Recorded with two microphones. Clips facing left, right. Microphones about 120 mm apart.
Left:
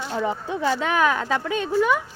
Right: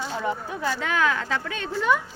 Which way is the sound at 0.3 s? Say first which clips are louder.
Left 3 dB; 25° left (ahead or behind).